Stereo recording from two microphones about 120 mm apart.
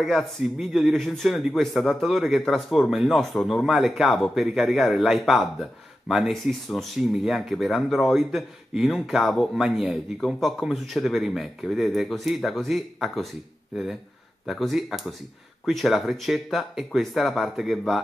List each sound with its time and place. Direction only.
0.0 s speech: centre (ahead or behind)
14.4 s speech: centre (ahead or behind)